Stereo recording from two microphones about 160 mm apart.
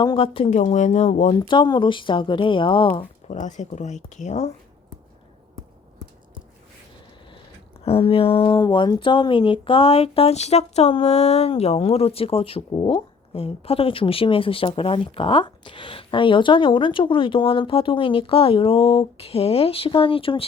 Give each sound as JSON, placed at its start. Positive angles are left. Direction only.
{"t": 0.0, "sound": "speech", "side_deg": 30}
{"t": 0.5, "sound": "speech", "side_deg": 45}
{"t": 1.4, "sound": "speech", "side_deg": 30}
{"t": 3.2, "sound": "speech", "side_deg": 50}
{"t": 7.9, "sound": "speech", "side_deg": 35}